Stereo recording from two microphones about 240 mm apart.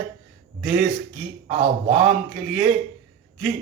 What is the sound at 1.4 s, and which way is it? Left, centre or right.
Speech, right.